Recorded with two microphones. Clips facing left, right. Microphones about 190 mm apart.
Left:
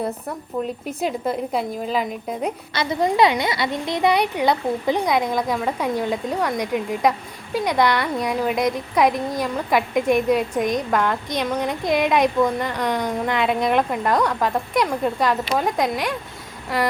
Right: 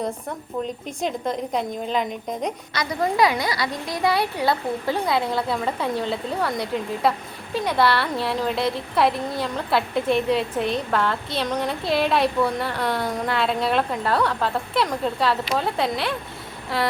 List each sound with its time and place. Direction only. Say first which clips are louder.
0.9 s speech: left 2 dB; 5° left (ahead or behind)
2.7 s a woman's voice: left 3 dB; 25° left (ahead or behind)